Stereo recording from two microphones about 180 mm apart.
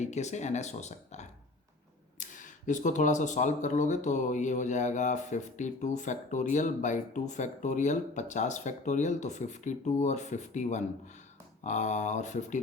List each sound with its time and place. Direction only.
0.0 s speech: 40° left (ahead or behind)